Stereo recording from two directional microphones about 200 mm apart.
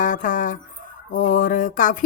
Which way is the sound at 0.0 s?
40° left (ahead or behind).